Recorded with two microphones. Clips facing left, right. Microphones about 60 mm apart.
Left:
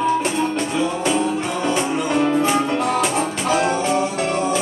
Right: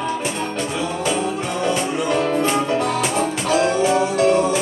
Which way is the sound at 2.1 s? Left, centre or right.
Centre.